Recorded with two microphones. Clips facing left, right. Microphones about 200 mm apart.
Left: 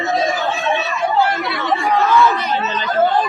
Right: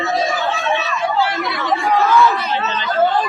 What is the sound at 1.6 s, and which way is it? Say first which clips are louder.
Chatter: right 1 dB; centre (ahead or behind).